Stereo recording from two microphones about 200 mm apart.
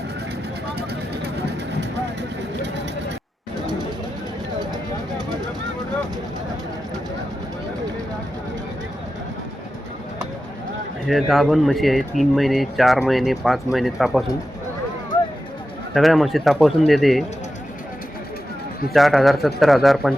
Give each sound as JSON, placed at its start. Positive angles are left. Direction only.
{"t": 0.8, "sound": "vehicle", "side_deg": -55}
{"t": 4.6, "sound": "a sound", "side_deg": -20}
{"t": 11.0, "sound": "speech", "side_deg": 0}
{"t": 16.0, "sound": "speech", "side_deg": 0}
{"t": 18.9, "sound": "speech", "side_deg": 0}